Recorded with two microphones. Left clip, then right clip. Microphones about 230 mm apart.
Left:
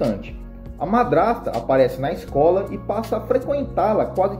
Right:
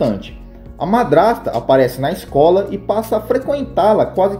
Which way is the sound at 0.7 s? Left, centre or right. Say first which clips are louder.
Right 5 dB; right.